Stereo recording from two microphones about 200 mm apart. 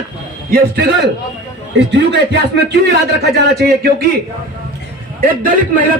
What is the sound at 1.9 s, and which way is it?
A man's voice, 60° right (ahead or behind).